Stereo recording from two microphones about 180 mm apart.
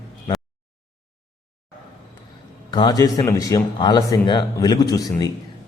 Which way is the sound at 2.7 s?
20° left (ahead or behind).